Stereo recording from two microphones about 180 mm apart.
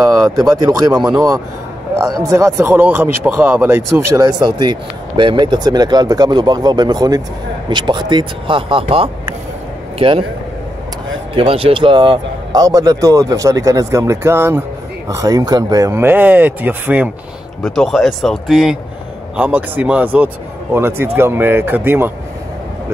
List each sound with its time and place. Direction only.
0.1 s a man's voice: 15° right (ahead or behind)
11.3 s speech: 30° right (ahead or behind); by 22.1 s 10° right (ahead or behind)